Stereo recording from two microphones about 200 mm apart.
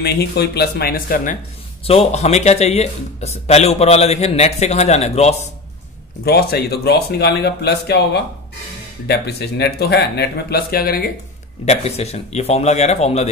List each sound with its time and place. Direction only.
0.0 s speech: 55° left (ahead or behind)
1.9 s speech: 30° left (ahead or behind)
6.2 s speech: 50° left (ahead or behind)
11.6 s speech: 30° left (ahead or behind)